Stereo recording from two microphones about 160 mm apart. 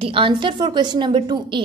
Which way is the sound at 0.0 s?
35° right (ahead or behind).